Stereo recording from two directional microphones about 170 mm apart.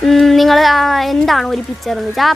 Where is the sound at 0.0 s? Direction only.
Centre (ahead or behind).